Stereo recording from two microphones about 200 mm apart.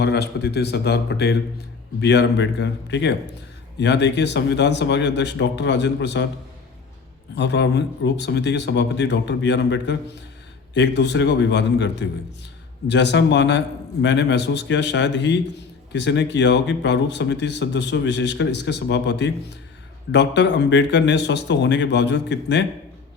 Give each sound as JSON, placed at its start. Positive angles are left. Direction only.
{"t": 0.0, "sound": "speech", "side_deg": 55}
{"t": 7.3, "sound": "speech", "side_deg": 60}